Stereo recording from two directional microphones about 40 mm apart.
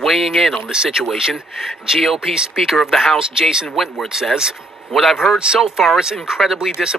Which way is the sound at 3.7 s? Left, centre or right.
Centre.